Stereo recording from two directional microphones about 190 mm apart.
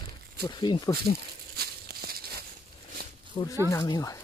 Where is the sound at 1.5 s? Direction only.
55° right (ahead or behind).